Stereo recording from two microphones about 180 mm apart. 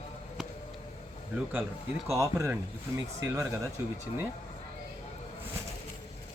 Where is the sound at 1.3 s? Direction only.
10° right (ahead or behind).